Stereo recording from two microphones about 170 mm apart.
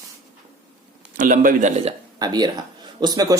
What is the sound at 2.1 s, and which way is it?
Speech, 25° right (ahead or behind).